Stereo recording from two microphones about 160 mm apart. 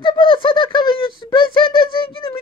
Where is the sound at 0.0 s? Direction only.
30° left (ahead or behind).